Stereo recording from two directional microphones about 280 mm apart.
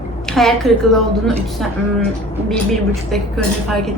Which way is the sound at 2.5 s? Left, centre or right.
Centre.